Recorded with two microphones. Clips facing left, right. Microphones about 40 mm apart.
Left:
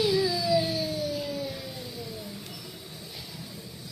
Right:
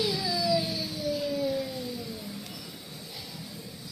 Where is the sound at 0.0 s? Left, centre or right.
Left.